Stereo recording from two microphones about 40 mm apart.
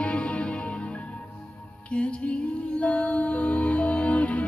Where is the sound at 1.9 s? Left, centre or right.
Left.